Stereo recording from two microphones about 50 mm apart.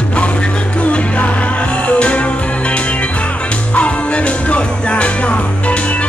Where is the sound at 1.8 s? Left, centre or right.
Left.